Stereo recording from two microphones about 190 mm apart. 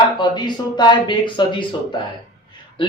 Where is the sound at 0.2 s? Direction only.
25° left (ahead or behind).